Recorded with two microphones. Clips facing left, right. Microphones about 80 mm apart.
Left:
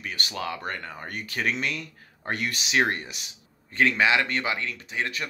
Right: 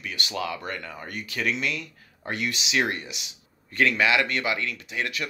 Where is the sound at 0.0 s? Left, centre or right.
Left.